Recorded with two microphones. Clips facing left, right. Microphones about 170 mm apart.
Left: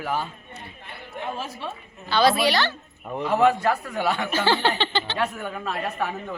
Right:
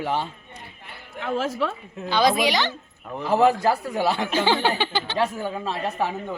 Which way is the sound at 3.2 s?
35° right (ahead or behind).